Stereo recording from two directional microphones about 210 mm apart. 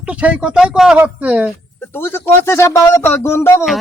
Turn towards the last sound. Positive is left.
turn(degrees=10)  # may be behind; listen again after turning